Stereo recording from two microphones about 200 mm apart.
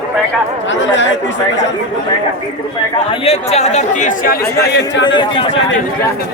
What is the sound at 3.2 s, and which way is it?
Speech, 30° left (ahead or behind).